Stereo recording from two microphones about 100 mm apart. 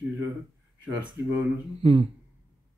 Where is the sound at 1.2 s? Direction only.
25° right (ahead or behind).